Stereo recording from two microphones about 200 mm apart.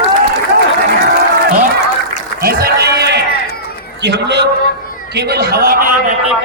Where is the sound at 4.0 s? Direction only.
60° right (ahead or behind).